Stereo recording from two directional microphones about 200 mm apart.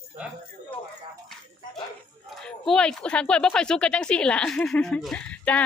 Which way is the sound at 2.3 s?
Centre (ahead or behind).